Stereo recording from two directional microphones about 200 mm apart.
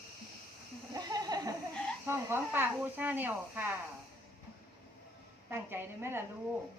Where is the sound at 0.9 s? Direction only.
20° right (ahead or behind).